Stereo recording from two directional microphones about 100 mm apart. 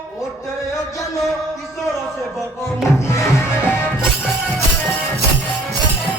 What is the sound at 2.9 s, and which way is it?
Music, 30° left (ahead or behind).